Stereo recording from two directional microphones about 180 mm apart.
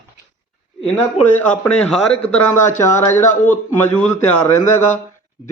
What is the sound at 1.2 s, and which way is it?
Speech, 35° left (ahead or behind).